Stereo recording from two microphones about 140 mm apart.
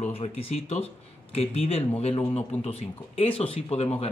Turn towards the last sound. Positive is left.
turn(degrees=45)  # may be behind; listen again after turning